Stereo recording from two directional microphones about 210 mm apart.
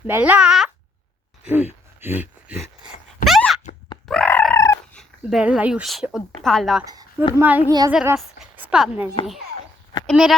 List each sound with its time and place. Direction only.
0.1 s speech: 5° right (ahead or behind)
2.0 s a sound: 10° right (ahead or behind); by 5.0 s 15° left (ahead or behind)
5.3 s speech: 5° right (ahead or behind)
6.8 s a woman's voice: 15° right (ahead or behind)
7.7 s a woman's voice: 20° right (ahead or behind)
8.4 s a sound: 5° right (ahead or behind)
10.1 s speech: centre (ahead or behind)